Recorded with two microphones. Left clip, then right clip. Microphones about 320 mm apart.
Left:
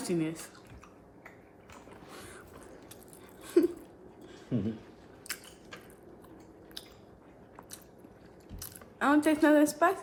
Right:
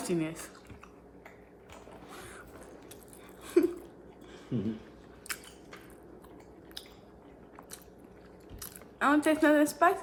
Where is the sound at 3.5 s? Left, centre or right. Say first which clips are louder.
Even; centre.